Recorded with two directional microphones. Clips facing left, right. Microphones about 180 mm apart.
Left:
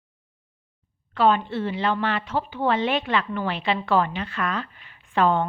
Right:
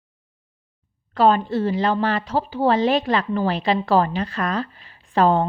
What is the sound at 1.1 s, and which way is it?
A woman's voice, 40° right (ahead or behind).